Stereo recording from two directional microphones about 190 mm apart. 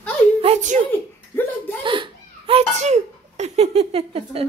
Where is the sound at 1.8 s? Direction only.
25° right (ahead or behind).